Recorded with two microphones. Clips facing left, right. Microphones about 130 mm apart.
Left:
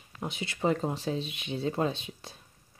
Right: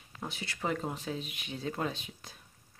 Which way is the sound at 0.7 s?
35° left (ahead or behind).